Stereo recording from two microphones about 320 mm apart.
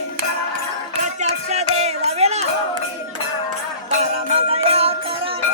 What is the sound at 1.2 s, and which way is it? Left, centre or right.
Music, right.